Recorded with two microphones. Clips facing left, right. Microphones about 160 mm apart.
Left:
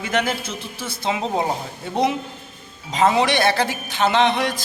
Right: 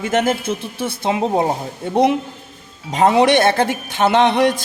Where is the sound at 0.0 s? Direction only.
45° right (ahead or behind).